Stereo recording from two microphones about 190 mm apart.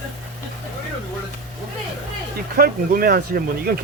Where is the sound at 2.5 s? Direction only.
50° right (ahead or behind).